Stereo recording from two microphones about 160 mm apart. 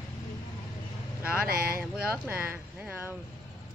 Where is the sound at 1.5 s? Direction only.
65° right (ahead or behind).